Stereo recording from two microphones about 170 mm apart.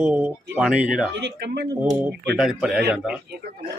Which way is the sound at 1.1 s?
80° right.